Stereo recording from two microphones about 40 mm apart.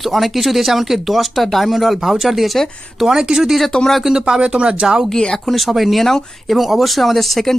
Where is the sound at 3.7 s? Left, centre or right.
Centre.